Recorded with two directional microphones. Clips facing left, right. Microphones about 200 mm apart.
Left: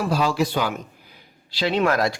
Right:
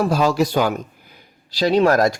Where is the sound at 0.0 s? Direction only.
45° right (ahead or behind).